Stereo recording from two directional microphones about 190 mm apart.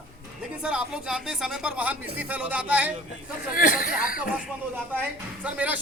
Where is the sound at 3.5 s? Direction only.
45° left (ahead or behind).